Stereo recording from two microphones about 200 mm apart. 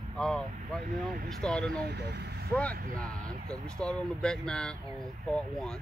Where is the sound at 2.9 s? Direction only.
5° left (ahead or behind).